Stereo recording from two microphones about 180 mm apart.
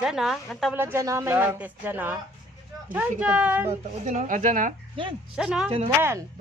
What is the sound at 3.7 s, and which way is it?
Speech, 40° right (ahead or behind).